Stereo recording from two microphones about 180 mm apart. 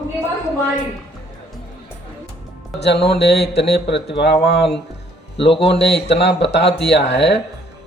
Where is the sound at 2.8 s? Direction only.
70° left (ahead or behind).